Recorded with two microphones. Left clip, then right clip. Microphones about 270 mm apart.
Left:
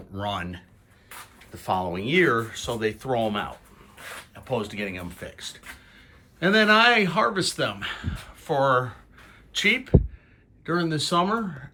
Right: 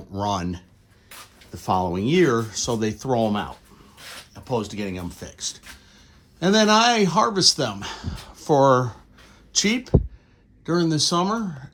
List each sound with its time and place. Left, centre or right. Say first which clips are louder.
0.1 s speech: right 4 dB; centre
1.5 s speech: right 3 dB; right